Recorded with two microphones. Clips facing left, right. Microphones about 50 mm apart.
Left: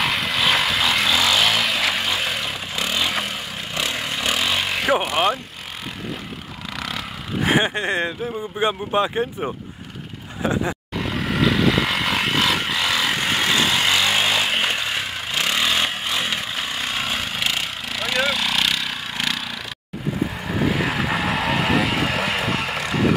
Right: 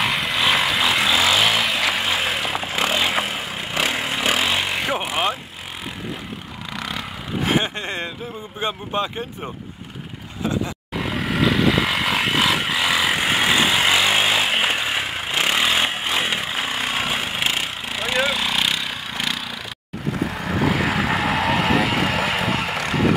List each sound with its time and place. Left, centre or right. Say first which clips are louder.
0.0 s vehicle: even; centre; by 3.1 s right
3.1 s a sound: right 2 dB; centre
3.7 s vehicle: right 3 dB; right; by 5.4 s centre
6.8 s vehicle: even; centre
7.4 s vehicle: left 3 dB; centre
8.5 s speech: left 4 dB; centre
11.0 s vehicle: right 1 dB; centre